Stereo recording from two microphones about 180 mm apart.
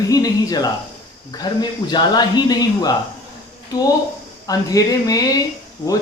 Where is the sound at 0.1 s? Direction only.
20° left (ahead or behind).